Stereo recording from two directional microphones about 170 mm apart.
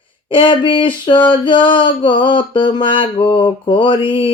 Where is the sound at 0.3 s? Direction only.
30° left (ahead or behind).